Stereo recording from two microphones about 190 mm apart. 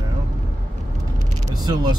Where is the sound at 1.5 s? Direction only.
20° right (ahead or behind).